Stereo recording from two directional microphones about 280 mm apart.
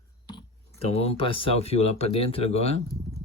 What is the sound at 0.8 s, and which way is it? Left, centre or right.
Speech, left.